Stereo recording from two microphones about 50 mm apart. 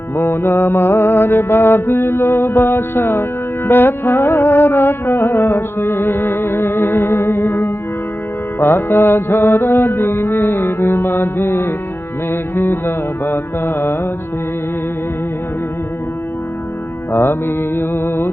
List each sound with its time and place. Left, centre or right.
0.2 s music: left
17.1 s music: left